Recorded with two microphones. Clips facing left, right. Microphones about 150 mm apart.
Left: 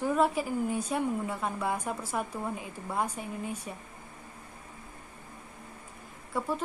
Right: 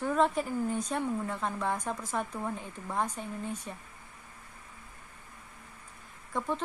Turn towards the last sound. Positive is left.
turn(degrees=5)  # may be behind; listen again after turning